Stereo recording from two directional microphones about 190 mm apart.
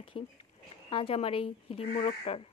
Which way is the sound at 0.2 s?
25° left (ahead or behind).